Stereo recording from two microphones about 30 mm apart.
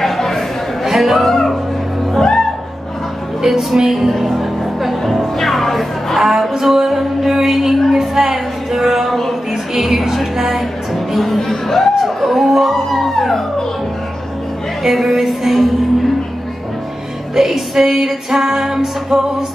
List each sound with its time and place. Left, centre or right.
0.0 s a sound: centre
0.8 s music: centre
1.2 s music: centre
3.4 s music: centre
5.0 s music: centre
6.1 s music: centre
8.0 s speech: centre
9.5 s a sound: centre
9.9 s music: centre
11.1 s speech: centre
12.0 s music: centre
14.8 s music: centre
17.4 s music: centre